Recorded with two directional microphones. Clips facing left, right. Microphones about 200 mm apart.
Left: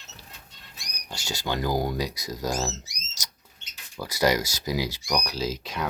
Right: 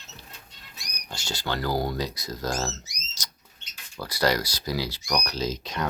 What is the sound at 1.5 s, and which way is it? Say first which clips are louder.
Speech: left 1 dB; 15° left (ahead or behind).